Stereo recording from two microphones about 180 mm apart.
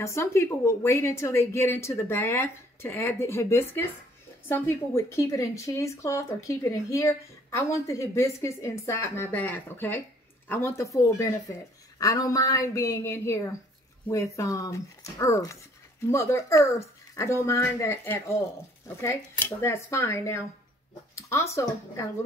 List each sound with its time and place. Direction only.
0.0 s speech: 15° left (ahead or behind)
19.6 s speech: 15° left (ahead or behind)